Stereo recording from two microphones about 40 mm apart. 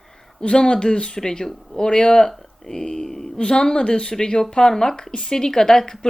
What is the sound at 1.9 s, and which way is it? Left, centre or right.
Speech, centre.